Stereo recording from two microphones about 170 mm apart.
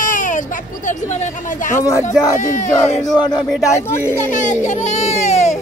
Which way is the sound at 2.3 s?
45° left (ahead or behind).